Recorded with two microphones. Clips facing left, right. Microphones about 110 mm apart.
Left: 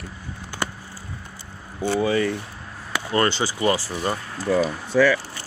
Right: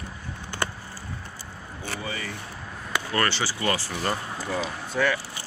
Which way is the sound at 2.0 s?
70° left (ahead or behind).